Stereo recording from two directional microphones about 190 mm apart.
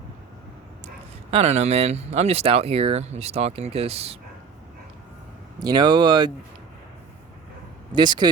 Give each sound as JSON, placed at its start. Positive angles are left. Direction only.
{"t": 1.3, "sound": "speech", "side_deg": -35}
{"t": 5.5, "sound": "speech", "side_deg": -20}
{"t": 7.9, "sound": "speech", "side_deg": -20}